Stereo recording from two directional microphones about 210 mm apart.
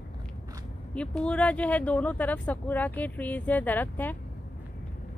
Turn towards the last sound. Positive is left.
turn(degrees=10)  # may be behind; listen again after turning